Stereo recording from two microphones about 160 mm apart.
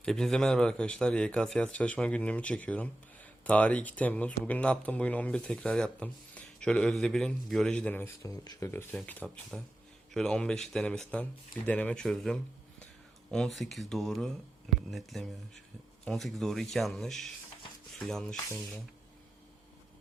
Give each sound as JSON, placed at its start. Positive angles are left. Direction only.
{"t": 0.0, "sound": "speech", "side_deg": 5}
{"t": 8.9, "sound": "speech", "side_deg": 10}